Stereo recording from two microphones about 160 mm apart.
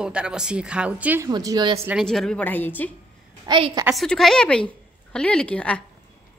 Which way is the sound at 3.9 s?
Centre (ahead or behind).